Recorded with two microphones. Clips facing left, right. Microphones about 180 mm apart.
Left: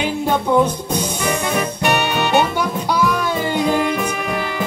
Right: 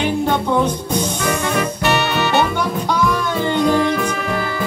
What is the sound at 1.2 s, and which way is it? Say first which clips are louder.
Music: right 1 dB; 10° left (ahead or behind).